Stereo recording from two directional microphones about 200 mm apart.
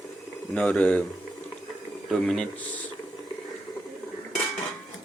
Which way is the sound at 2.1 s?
5° left (ahead or behind).